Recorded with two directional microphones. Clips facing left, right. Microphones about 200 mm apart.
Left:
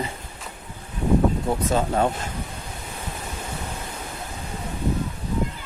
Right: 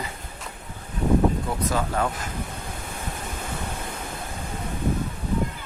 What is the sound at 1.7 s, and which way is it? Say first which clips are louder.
Speech: left 4 dB; 25° left (ahead or behind).